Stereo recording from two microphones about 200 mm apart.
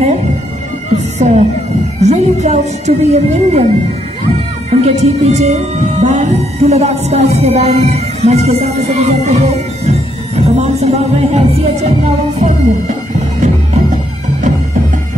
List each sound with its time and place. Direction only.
1.2 s speech: 35° right (ahead or behind)
13.4 s music: 35° right (ahead or behind)